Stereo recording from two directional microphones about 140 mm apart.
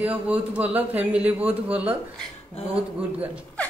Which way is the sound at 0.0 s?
10° right (ahead or behind).